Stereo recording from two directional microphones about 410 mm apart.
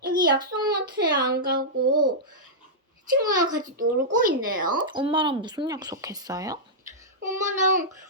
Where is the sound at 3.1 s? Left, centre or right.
Centre.